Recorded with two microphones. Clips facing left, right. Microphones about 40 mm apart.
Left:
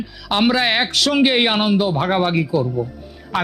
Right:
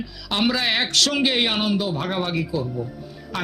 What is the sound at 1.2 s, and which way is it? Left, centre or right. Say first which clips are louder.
Speech: left 5 dB; left.